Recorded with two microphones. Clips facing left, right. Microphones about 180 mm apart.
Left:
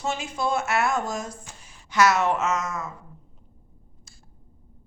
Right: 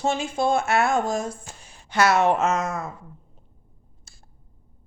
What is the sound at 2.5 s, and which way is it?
Speech, 55° right (ahead or behind).